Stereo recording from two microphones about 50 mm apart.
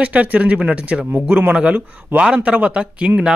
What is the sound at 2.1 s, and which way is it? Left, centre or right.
Speech, right.